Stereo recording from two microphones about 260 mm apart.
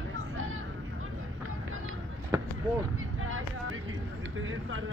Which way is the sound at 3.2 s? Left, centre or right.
Right.